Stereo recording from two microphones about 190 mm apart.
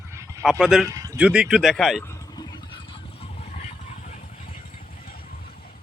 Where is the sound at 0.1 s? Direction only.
15° right (ahead or behind).